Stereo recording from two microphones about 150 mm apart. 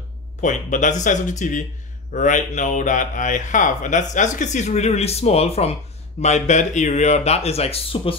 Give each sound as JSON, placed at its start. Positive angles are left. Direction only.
{"t": 0.4, "sound": "speech", "side_deg": 55}